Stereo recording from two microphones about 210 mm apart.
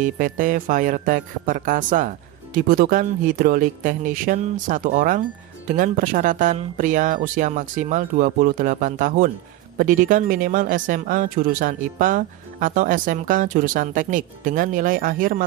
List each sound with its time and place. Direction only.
0.0 s speech: 40° right (ahead or behind)